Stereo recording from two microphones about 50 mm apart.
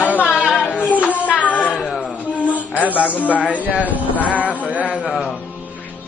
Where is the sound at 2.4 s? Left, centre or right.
Right.